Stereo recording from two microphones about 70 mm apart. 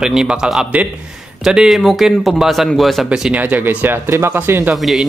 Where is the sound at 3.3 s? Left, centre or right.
Right.